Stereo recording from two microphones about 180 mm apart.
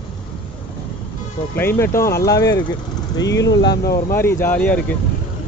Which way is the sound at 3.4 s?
80° left.